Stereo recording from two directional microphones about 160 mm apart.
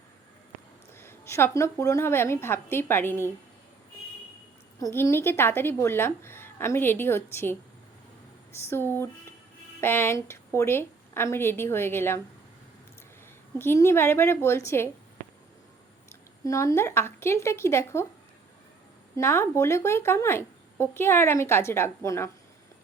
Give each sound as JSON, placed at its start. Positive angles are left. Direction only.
{"t": 0.9, "sound": "speech", "side_deg": 15}
{"t": 4.8, "sound": "speech", "side_deg": 20}
{"t": 8.7, "sound": "speech", "side_deg": 15}
{"t": 13.6, "sound": "speech", "side_deg": 15}
{"t": 16.0, "sound": "speech", "side_deg": 20}
{"t": 19.1, "sound": "speech", "side_deg": 15}